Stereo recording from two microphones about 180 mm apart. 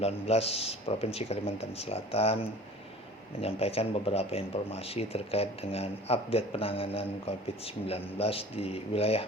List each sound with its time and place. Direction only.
0.0 s speech: 35° left (ahead or behind)
3.4 s speech: 35° left (ahead or behind)